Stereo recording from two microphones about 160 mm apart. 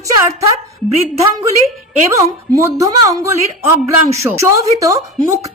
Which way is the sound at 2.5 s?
20° right (ahead or behind).